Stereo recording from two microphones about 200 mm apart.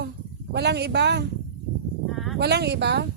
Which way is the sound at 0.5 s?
55° right (ahead or behind).